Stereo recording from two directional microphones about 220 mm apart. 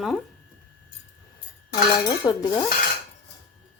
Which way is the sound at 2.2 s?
20° left (ahead or behind).